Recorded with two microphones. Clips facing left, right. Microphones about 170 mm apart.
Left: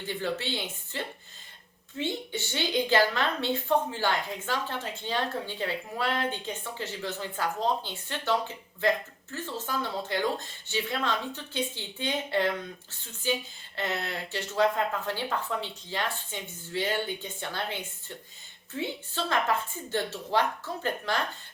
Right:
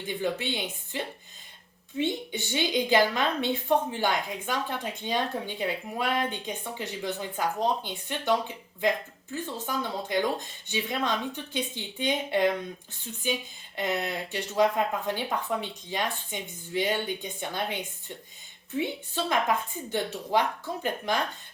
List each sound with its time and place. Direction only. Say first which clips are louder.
0.1 s a woman's voice: right 2 dB; 15° right (ahead or behind)
13.7 s a woman's voice: right 3 dB; 15° right (ahead or behind)